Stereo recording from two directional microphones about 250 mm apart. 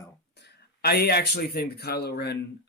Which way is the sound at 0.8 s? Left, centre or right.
Left.